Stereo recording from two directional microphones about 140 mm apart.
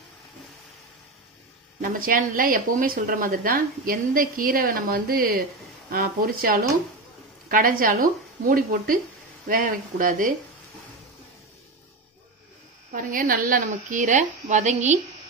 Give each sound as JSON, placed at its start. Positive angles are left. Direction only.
{"t": 1.8, "sound": "a woman's voice", "side_deg": -90}
{"t": 12.9, "sound": "a woman's voice", "side_deg": -70}